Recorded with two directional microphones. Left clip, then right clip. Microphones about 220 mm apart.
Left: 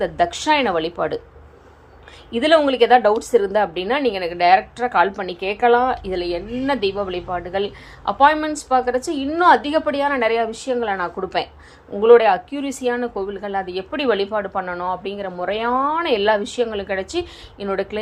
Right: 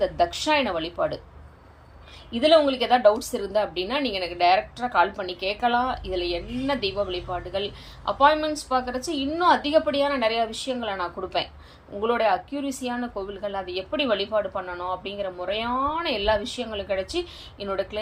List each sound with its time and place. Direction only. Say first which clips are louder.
0.0 s a woman's voice: left 4 dB; 20° left (ahead or behind)
2.3 s a woman's voice: left 3 dB; 15° left (ahead or behind)